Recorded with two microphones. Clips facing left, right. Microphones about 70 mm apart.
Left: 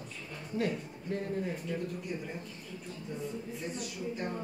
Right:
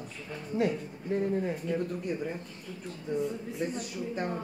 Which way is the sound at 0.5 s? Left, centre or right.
Right.